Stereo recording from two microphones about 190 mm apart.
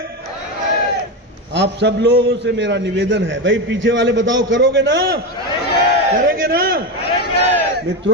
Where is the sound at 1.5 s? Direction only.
65° right (ahead or behind).